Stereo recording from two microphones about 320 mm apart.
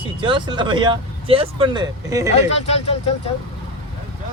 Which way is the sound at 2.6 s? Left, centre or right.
Centre.